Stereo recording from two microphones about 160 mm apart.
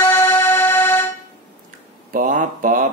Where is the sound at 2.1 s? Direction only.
55° right (ahead or behind).